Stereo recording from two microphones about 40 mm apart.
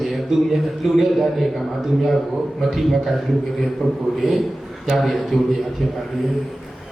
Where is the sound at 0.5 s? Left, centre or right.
Centre.